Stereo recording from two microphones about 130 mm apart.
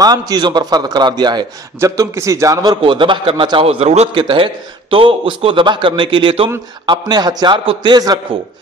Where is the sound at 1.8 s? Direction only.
25° right (ahead or behind); by 4.2 s 55° right (ahead or behind).